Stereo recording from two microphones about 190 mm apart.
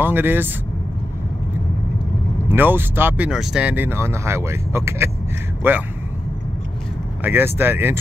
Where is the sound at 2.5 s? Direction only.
10° right (ahead or behind).